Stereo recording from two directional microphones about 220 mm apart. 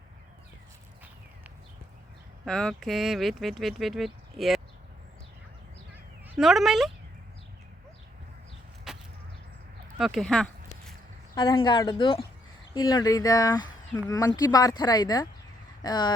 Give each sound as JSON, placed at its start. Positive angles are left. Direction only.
{"t": 2.4, "sound": "speech", "side_deg": 5}
{"t": 6.2, "sound": "speech", "side_deg": 0}
{"t": 8.9, "sound": "a sound", "side_deg": 0}
{"t": 11.3, "sound": "speech", "side_deg": 20}